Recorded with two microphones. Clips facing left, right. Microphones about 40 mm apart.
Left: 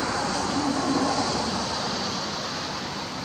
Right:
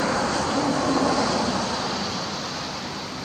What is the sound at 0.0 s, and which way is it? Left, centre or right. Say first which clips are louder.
Vehicle: right 3 dB; right.